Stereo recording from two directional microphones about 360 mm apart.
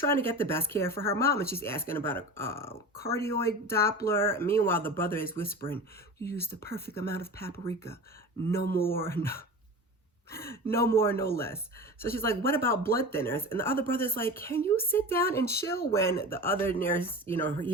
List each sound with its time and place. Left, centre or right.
0.0 s speech: centre
8.5 s speech: left
9.0 s speech: centre
10.3 s speech: centre